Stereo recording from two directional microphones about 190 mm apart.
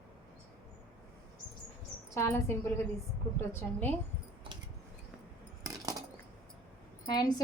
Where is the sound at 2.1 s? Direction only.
15° left (ahead or behind).